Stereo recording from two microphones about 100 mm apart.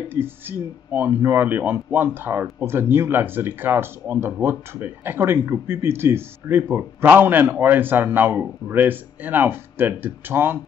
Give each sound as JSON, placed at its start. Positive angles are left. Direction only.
{"t": 0.1, "sound": "speech", "side_deg": -20}